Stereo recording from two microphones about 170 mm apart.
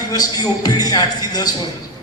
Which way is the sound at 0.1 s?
20° left (ahead or behind).